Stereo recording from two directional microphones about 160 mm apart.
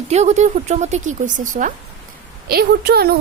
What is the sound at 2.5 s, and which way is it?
Speech, 75° right (ahead or behind).